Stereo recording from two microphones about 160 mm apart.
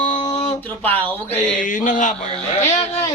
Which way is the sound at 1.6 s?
55° left (ahead or behind).